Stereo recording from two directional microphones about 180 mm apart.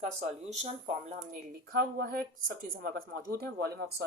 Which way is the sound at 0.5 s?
40° right (ahead or behind).